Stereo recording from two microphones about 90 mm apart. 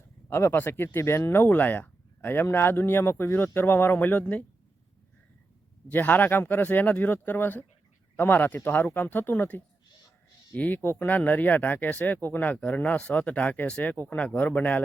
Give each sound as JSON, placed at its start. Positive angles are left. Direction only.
{"t": 0.3, "sound": "speech", "side_deg": 25}
{"t": 5.9, "sound": "speech", "side_deg": 20}